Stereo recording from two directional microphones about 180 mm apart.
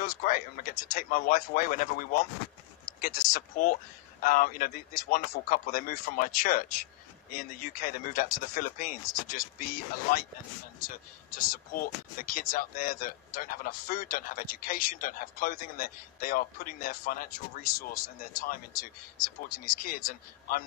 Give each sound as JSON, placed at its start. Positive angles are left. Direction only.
{"t": 0.0, "sound": "speech", "side_deg": 50}
{"t": 11.3, "sound": "speech", "side_deg": 50}